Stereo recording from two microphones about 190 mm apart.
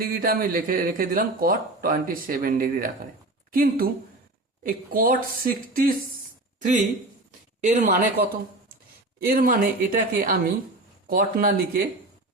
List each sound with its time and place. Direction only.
0.0 s a man's voice: 50° right (ahead or behind)
7.6 s a man's voice: 40° right (ahead or behind)